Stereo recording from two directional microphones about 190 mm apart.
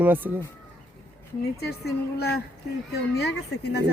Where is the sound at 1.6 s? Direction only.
60° left (ahead or behind).